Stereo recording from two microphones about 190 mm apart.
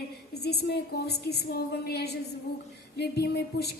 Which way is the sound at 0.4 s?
60° left (ahead or behind).